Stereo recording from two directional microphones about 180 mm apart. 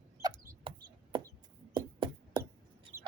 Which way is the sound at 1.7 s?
25° right (ahead or behind).